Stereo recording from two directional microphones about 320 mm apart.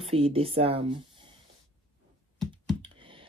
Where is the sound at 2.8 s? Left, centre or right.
Centre.